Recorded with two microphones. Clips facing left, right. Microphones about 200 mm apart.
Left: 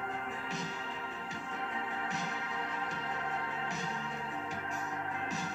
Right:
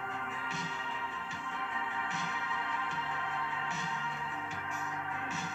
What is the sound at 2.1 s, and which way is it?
Music, 40° left (ahead or behind).